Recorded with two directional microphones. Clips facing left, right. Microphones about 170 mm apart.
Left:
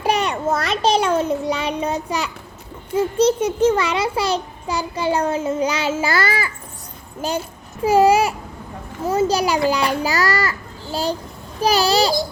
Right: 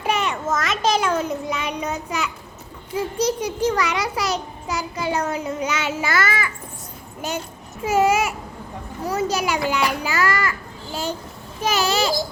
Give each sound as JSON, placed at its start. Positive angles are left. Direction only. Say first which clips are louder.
{"t": 0.0, "sound": "a sound", "louder": "left 3 dB", "side_deg": 35}
{"t": 2.9, "sound": "a child's voice", "louder": "left 6 dB", "side_deg": 25}
{"t": 11.6, "sound": "a child's voice", "louder": "left 4 dB", "side_deg": 35}